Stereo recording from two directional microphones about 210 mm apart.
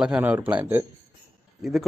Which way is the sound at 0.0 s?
5° right (ahead or behind).